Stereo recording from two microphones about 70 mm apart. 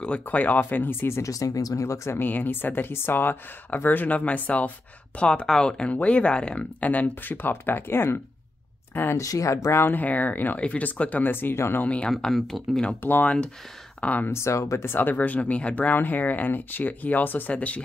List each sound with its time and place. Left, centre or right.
0.2 s speech: left
1.2 s speech: left
9.1 s speech: left
9.9 s speech: left
11.8 s speech: centre
12.1 s speech: centre
13.0 s speech: left
14.3 s speech: left
15.0 s speech: left